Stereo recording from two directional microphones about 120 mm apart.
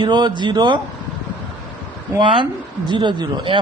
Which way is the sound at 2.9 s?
40° right (ahead or behind).